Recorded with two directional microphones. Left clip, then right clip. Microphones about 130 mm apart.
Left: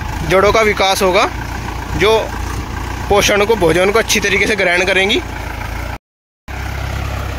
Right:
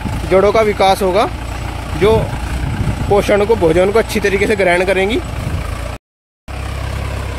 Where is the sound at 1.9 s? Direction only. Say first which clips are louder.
Even; 15° right (ahead or behind).